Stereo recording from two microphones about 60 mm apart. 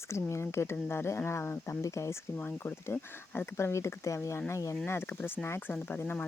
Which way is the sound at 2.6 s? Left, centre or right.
Left.